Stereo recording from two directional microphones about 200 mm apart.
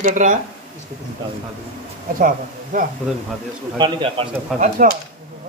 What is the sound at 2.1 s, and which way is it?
Speech, 45° right (ahead or behind).